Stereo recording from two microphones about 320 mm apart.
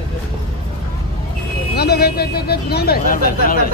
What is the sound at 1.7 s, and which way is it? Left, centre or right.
Speech, left.